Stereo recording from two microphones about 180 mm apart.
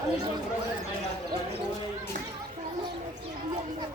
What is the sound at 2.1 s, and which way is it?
Children playing, 45° right (ahead or behind).